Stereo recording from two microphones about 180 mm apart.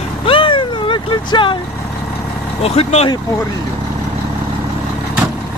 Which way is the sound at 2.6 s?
35° left (ahead or behind).